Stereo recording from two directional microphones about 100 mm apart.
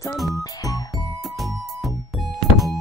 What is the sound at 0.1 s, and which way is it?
Music, centre (ahead or behind).